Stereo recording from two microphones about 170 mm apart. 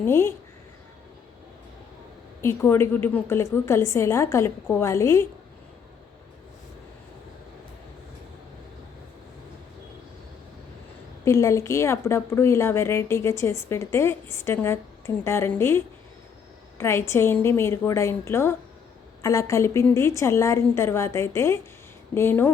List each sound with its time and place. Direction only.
0.0 s a woman's voice: 15° left (ahead or behind)
2.4 s a woman's voice: 15° left (ahead or behind)
11.3 s a woman's voice: 15° left (ahead or behind)